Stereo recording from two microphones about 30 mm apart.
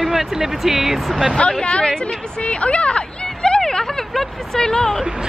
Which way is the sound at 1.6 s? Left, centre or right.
Left.